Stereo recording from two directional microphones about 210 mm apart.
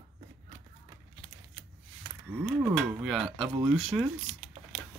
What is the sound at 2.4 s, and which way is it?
Speech, 5° right (ahead or behind).